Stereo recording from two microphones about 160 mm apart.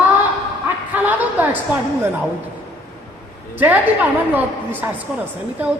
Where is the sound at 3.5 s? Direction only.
10° right (ahead or behind).